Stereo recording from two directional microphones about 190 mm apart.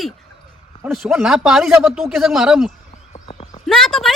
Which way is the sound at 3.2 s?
25° left (ahead or behind).